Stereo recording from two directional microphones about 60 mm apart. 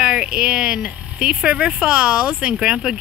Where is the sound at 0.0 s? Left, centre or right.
Centre.